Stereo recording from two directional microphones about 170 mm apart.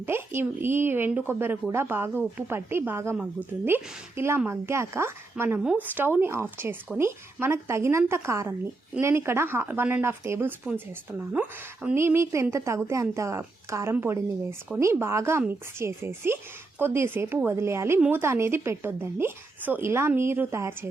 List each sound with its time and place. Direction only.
0.0 s a woman's voice: 15° right (ahead or behind)